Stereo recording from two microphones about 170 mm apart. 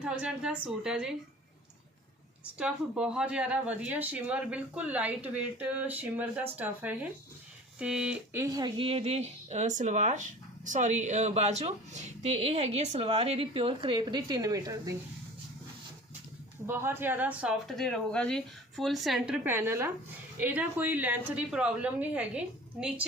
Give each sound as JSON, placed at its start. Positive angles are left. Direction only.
{"t": 0.0, "sound": "speech", "side_deg": -5}
{"t": 2.6, "sound": "speech", "side_deg": -5}
{"t": 8.4, "sound": "speech", "side_deg": -25}
{"t": 16.6, "sound": "speech", "side_deg": -15}
{"t": 17.7, "sound": "speech", "side_deg": 0}